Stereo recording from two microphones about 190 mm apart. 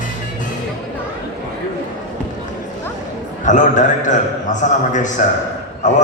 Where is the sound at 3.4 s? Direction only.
40° left (ahead or behind).